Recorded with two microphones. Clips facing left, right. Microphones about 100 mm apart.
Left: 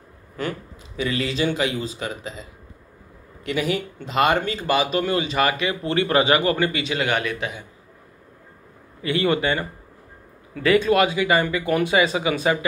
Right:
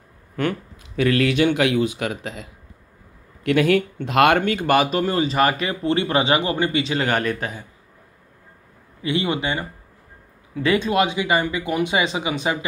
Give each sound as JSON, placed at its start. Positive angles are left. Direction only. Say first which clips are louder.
{"t": 0.4, "sound": "speech", "louder": "right 4 dB", "side_deg": -60}
{"t": 3.4, "sound": "speech", "louder": "right 7 dB", "side_deg": -65}
{"t": 9.0, "sound": "speech", "louder": "left 2 dB", "side_deg": -20}